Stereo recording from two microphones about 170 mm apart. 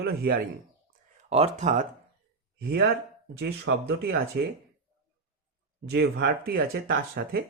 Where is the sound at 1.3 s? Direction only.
35° right (ahead or behind).